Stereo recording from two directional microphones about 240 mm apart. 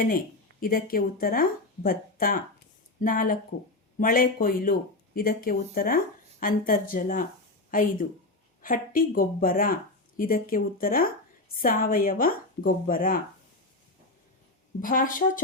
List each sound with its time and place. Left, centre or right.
0.6 s speech: left
14.8 s speech: left